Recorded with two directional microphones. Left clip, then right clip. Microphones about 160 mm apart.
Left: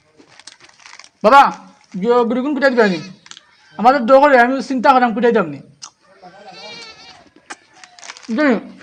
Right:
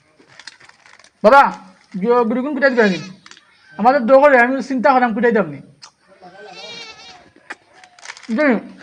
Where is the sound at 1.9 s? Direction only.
15° left (ahead or behind).